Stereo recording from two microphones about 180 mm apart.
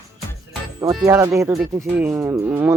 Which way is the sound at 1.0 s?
20° right (ahead or behind).